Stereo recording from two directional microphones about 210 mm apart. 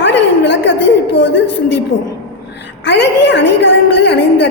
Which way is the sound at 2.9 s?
55° left (ahead or behind).